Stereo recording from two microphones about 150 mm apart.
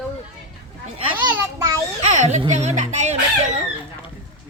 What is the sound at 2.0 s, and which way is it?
Speech, 50° right (ahead or behind).